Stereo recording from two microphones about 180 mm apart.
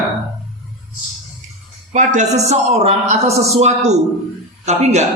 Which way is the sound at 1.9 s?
40° right (ahead or behind).